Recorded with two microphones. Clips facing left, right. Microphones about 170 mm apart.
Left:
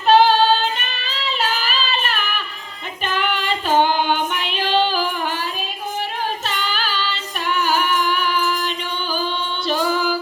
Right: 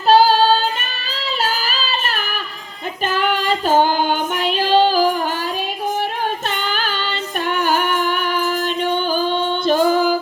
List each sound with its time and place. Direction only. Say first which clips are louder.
0.1 s female singing: right 1 dB; 35° right (ahead or behind)
1.1 s music: right 1 dB; 40° right (ahead or behind)
3.1 s child singing: right 3 dB; 40° right (ahead or behind)
6.5 s child singing: right 2 dB; 50° right (ahead or behind)